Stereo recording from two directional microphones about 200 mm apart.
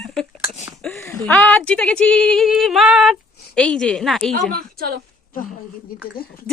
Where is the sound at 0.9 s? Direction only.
10° left (ahead or behind).